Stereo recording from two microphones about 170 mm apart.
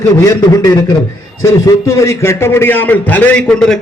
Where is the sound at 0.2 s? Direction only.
20° left (ahead or behind).